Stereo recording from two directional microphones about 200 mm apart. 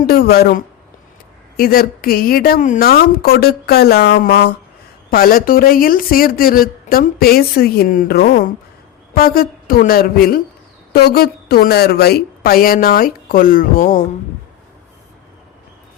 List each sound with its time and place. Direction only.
0.0 s speech: 50° left (ahead or behind)